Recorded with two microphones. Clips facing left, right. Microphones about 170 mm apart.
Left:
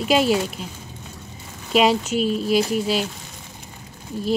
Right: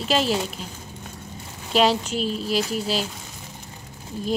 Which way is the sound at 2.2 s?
45° left (ahead or behind).